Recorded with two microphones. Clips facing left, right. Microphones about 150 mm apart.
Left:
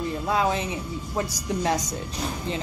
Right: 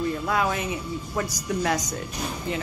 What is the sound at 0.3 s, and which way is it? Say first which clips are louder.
A woman's voice: left 4 dB; 25° left (ahead or behind).